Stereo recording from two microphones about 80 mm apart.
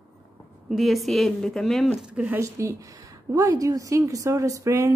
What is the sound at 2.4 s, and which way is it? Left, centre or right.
A woman's voice, right.